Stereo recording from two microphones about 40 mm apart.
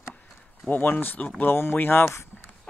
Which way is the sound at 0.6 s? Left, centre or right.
Left.